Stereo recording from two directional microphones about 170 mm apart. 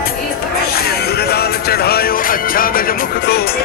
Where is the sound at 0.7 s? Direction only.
65° left (ahead or behind).